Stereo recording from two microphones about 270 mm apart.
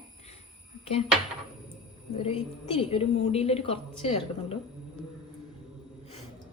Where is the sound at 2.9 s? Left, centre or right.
Left.